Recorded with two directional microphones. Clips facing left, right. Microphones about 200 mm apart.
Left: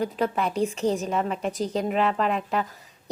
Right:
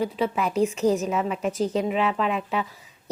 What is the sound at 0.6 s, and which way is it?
Speech, 35° left (ahead or behind).